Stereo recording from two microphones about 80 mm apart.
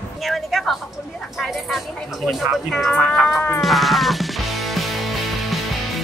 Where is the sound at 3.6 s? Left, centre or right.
Centre.